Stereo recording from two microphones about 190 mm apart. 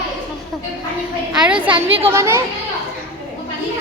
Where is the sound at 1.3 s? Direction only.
5° right (ahead or behind).